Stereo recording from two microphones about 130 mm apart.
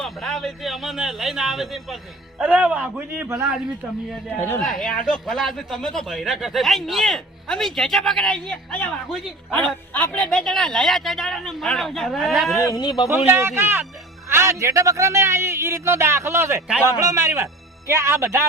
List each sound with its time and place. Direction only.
0.0 s a man's voice: centre (ahead or behind)
4.4 s speech: 15° left (ahead or behind)
4.6 s speech: 5° left (ahead or behind)
12.5 s speech: 30° left (ahead or behind)
13.3 s a man's voice: 20° right (ahead or behind)
14.3 s music: 20° right (ahead or behind)
14.6 s speech: 25° right (ahead or behind)